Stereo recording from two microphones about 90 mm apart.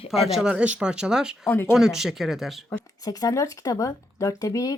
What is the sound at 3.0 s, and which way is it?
Speech, 40° left (ahead or behind).